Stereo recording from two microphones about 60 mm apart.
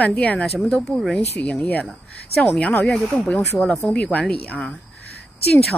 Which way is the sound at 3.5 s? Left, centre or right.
Centre.